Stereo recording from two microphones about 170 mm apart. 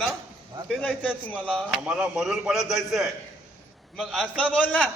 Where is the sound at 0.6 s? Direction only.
Centre (ahead or behind).